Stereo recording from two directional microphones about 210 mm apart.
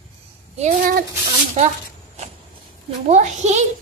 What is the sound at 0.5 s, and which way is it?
Speech, 30° right (ahead or behind).